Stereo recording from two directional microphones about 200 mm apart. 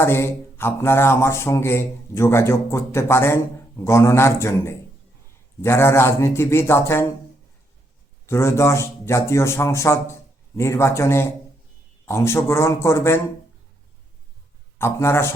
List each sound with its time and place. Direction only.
0.0 s speech: 10° left (ahead or behind)
8.3 s speech: 15° left (ahead or behind)
14.8 s speech: 10° left (ahead or behind)